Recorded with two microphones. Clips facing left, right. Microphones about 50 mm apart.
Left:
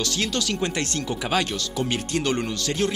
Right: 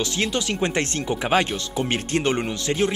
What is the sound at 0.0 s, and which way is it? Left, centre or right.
Speech, right.